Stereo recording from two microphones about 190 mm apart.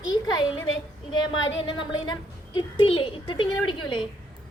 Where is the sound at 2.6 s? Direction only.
30° left (ahead or behind).